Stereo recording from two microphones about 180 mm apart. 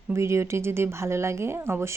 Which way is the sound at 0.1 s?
15° right (ahead or behind).